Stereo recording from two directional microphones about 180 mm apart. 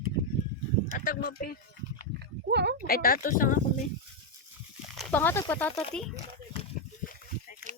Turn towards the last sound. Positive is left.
turn(degrees=5)  # may be behind; listen again after turning